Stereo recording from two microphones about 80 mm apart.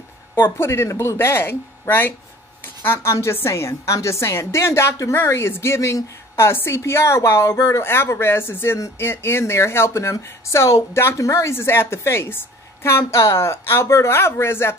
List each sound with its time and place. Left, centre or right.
0.4 s a woman's voice: left